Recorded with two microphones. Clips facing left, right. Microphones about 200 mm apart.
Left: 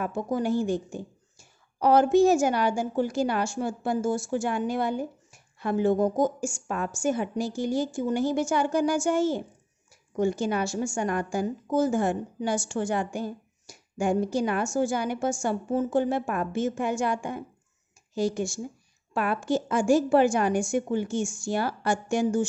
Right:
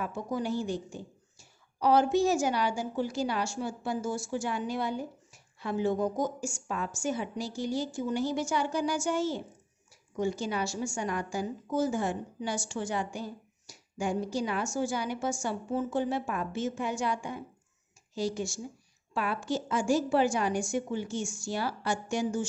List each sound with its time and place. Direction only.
0.0 s a woman's voice: 50° left (ahead or behind)